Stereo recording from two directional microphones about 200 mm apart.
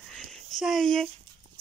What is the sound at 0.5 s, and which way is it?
Speech, centre (ahead or behind).